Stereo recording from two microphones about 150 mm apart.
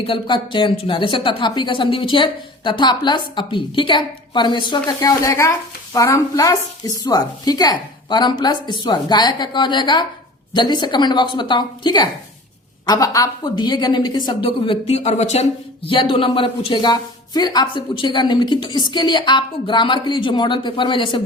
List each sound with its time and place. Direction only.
0.0 s a woman's voice: 35° left (ahead or behind)
15.9 s a woman's voice: 35° left (ahead or behind)